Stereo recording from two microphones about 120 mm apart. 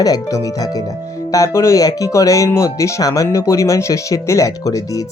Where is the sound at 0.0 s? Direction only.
30° left (ahead or behind).